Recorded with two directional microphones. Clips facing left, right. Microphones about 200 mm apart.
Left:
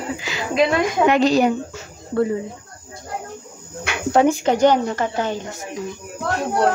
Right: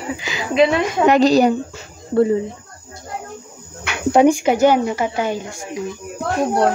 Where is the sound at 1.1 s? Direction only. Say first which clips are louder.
Right 5 dB; 35° right (ahead or behind).